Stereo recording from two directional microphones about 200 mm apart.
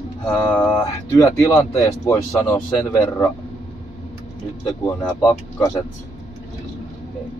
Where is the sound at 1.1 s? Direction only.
15° left (ahead or behind).